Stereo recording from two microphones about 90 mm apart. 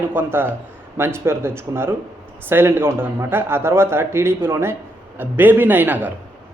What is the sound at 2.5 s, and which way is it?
Speech, 25° right (ahead or behind).